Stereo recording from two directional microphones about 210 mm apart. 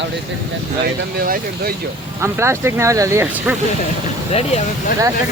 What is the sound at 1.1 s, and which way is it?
Speech, 45° right (ahead or behind).